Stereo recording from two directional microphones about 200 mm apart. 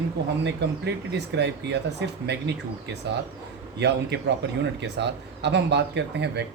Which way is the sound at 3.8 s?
55° right (ahead or behind).